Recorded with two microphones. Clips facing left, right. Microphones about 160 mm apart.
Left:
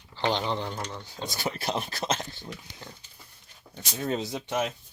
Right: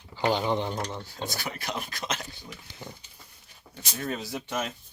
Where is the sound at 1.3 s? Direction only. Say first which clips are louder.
Left 7 dB; 25° left (ahead or behind).